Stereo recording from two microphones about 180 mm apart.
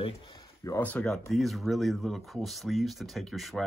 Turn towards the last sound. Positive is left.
turn(degrees=0)  # may be behind; listen again after turning